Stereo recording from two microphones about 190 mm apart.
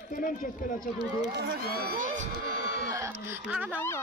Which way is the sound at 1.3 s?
60° right (ahead or behind).